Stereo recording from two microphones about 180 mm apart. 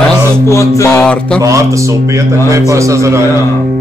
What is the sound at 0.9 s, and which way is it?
Mantra, 5° left (ahead or behind).